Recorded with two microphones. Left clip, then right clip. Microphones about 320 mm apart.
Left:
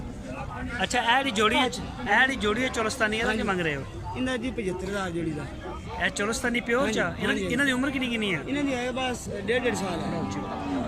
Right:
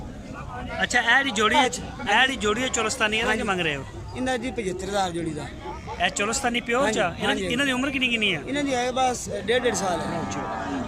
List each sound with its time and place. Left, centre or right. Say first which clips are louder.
0.8 s a man's voice: right 3 dB; centre
4.2 s speech: right 3 dB; centre
6.0 s a man's voice: right 3 dB; centre
8.5 s speech: right 4 dB; centre